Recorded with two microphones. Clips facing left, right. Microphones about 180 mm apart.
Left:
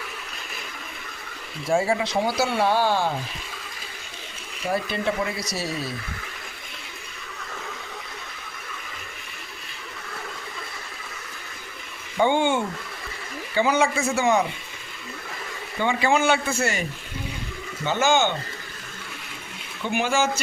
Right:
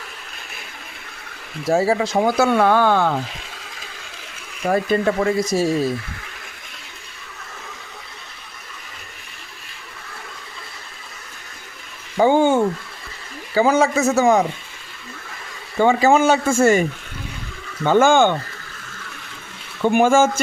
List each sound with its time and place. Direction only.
1.6 s speech: 40° right (ahead or behind); by 3.2 s 60° right (ahead or behind)
4.6 s speech: 50° right (ahead or behind)
12.1 s a man's voice: 40° right (ahead or behind)
15.8 s speech: 45° right (ahead or behind)
17.8 s speech: 50° right (ahead or behind)
19.8 s speech: 50° right (ahead or behind)